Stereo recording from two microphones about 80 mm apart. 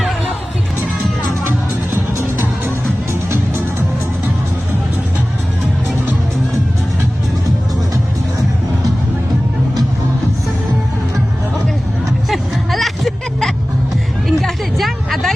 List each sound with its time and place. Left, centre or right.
1.5 s music: right
12.3 s music: centre
14.3 s vehicle: centre